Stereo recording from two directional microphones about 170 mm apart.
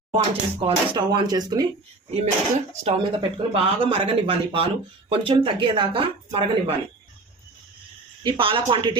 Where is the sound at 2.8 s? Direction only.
35° right (ahead or behind).